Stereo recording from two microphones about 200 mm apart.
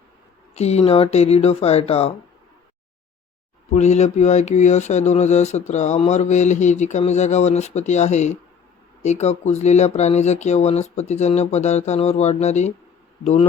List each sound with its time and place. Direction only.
0.5 s speech: 30° left (ahead or behind)
3.7 s speech: 35° left (ahead or behind)